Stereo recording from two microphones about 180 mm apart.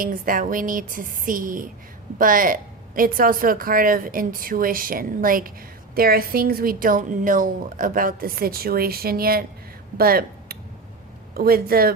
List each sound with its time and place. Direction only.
0.0 s a woman's voice: 50° right (ahead or behind)